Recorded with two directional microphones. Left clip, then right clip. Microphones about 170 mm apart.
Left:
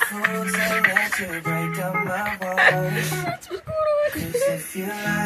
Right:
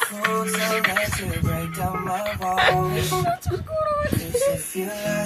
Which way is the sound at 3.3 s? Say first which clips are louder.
Right 4 dB; 70° right (ahead or behind).